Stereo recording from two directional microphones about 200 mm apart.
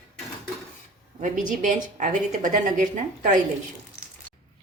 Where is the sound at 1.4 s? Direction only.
40° right (ahead or behind).